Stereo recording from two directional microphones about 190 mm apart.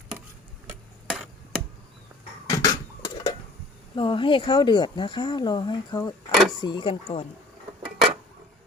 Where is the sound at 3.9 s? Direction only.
25° left (ahead or behind).